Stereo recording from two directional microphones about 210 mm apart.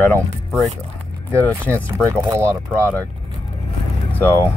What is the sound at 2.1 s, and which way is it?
Speech, 15° right (ahead or behind).